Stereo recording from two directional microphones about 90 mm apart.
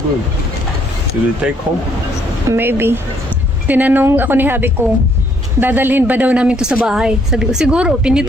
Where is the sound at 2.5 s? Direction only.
25° right (ahead or behind).